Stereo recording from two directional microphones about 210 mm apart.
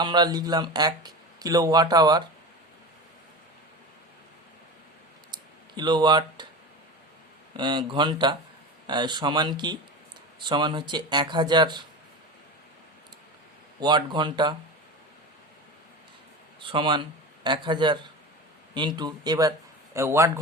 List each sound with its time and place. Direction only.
0.0 s speech: 20° right (ahead or behind)
5.3 s clicking: 20° right (ahead or behind)
7.5 s speech: 20° right (ahead or behind)
13.7 s speech: 20° right (ahead or behind)
16.6 s speech: 25° right (ahead or behind)